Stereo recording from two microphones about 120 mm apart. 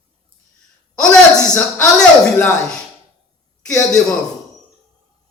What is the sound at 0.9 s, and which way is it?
A man's voice, 5° left (ahead or behind).